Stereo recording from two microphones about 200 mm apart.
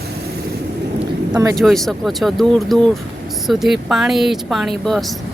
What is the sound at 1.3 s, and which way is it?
Speech, 15° right (ahead or behind).